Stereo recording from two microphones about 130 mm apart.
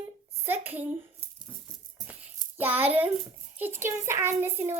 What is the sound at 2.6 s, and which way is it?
Child singing, 15° right (ahead or behind).